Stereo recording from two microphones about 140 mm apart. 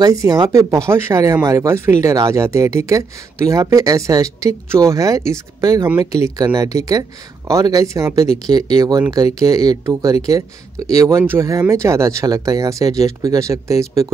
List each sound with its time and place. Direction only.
0.0 s speech: 25° right (ahead or behind)